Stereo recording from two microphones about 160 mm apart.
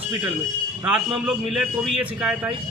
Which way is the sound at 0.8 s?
5° right (ahead or behind).